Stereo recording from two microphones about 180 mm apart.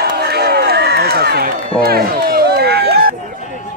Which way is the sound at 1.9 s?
55° right (ahead or behind).